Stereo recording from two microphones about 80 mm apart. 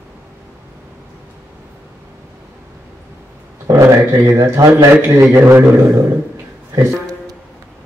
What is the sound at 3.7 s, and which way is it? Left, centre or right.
Speech, right.